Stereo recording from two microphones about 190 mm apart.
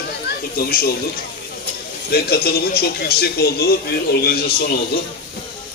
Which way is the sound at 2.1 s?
55° left (ahead or behind).